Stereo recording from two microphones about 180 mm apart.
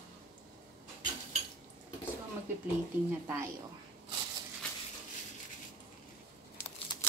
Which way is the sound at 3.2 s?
15° right (ahead or behind).